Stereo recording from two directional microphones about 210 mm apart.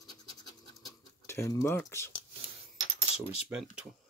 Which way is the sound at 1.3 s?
15° left (ahead or behind).